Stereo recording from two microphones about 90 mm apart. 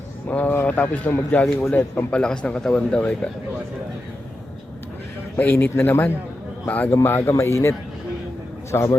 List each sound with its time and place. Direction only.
0.3 s speech: 20° left (ahead or behind)
5.4 s a man's voice: 25° left (ahead or behind)